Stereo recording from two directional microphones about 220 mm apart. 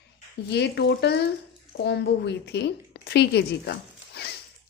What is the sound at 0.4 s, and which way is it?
A woman's voice, 50° left (ahead or behind).